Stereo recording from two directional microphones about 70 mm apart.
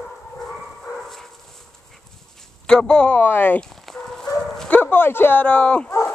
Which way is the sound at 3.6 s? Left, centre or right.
Centre.